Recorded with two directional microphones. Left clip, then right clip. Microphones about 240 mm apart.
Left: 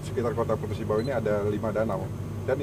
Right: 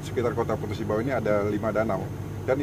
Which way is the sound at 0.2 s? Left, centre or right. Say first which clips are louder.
Right 1 dB; right.